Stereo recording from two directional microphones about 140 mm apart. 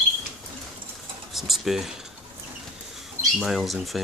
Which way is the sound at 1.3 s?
Centre (ahead or behind).